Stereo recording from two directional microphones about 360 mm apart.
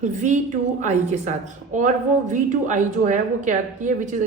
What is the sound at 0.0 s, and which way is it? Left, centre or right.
Speech, centre.